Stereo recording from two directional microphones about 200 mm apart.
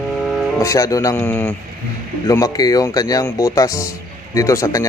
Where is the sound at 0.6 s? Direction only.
15° left (ahead or behind).